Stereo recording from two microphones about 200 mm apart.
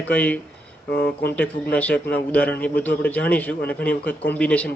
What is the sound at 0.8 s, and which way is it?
Speech, 50° left (ahead or behind).